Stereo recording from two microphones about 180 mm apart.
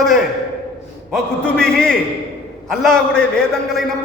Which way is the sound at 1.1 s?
5° left (ahead or behind).